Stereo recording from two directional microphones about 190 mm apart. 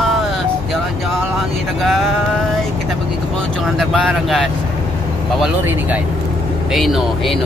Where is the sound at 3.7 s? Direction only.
Centre (ahead or behind).